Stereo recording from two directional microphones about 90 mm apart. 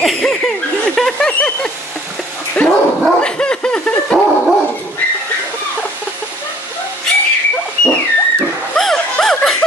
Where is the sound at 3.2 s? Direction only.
10° left (ahead or behind).